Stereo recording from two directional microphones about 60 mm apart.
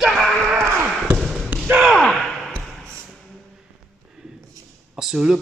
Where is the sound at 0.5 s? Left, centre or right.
Right.